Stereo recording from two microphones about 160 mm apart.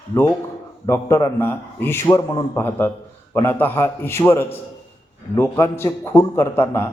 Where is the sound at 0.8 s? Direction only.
20° left (ahead or behind).